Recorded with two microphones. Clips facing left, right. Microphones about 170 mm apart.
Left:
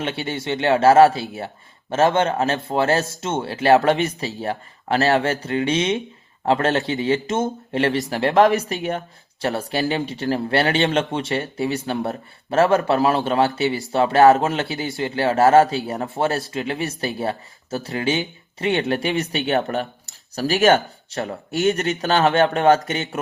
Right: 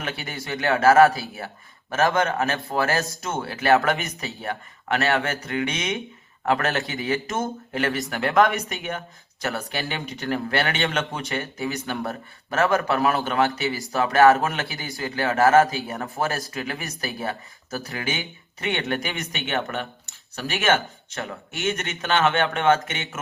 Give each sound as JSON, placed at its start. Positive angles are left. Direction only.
{"t": 0.0, "sound": "speech", "side_deg": 25}